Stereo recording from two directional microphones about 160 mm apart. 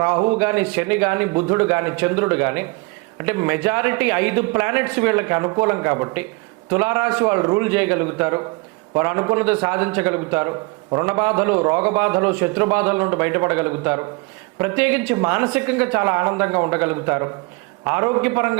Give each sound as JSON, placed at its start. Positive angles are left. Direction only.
{"t": 0.0, "sound": "a man's voice", "side_deg": -20}